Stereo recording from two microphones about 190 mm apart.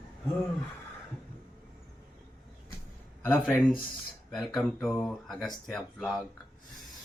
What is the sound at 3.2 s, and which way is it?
Speech, 10° left (ahead or behind).